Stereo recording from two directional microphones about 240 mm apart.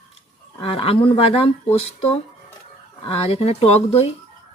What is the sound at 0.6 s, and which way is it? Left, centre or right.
Speech, left.